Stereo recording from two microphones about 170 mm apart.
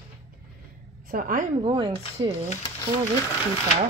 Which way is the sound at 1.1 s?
55° right (ahead or behind).